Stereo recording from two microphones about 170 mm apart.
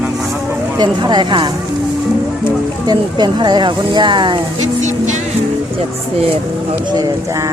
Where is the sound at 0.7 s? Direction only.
25° right (ahead or behind).